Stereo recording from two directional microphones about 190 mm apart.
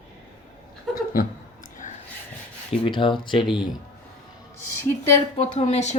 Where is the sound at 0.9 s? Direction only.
50° left (ahead or behind).